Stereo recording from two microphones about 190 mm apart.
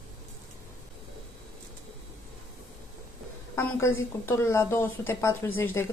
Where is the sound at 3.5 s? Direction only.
15° left (ahead or behind).